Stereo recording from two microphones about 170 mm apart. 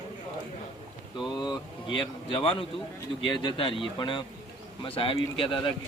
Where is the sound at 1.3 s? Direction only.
25° left (ahead or behind).